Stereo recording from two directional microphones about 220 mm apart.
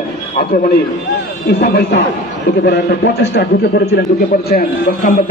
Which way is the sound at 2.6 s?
50° left (ahead or behind).